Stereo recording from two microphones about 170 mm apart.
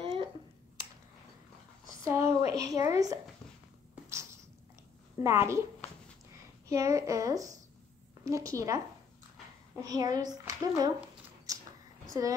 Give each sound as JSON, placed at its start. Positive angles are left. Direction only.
{"t": 0.0, "sound": "finger snapping", "side_deg": -30}
{"t": 2.0, "sound": "a sound", "side_deg": -15}
{"t": 2.5, "sound": "a woman's voice", "side_deg": -20}
{"t": 5.2, "sound": "a woman's voice", "side_deg": -15}
{"t": 6.7, "sound": "a woman's voice", "side_deg": -20}
{"t": 11.5, "sound": "a sound", "side_deg": -20}
{"t": 12.1, "sound": "a woman's voice", "side_deg": -20}